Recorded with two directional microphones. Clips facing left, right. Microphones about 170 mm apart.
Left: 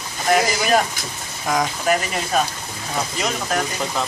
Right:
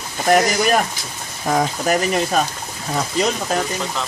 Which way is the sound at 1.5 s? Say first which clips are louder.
Right 1 dB; 30° right (ahead or behind).